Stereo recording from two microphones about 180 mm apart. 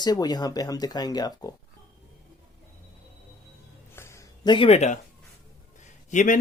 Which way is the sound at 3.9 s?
15° left (ahead or behind).